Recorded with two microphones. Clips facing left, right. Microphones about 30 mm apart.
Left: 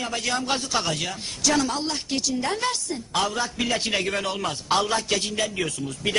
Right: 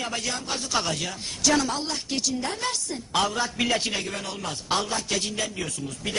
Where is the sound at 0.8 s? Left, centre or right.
Centre.